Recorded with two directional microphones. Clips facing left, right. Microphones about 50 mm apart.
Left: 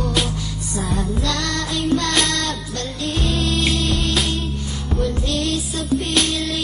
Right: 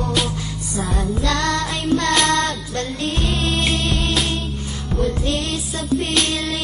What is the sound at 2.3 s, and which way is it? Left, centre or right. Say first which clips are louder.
Music: right 4 dB; right.